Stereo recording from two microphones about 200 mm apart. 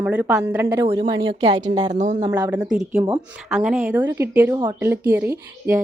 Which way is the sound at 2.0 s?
35° right (ahead or behind).